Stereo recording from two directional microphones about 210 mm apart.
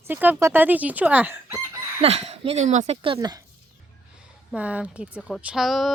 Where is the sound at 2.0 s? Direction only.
30° right (ahead or behind).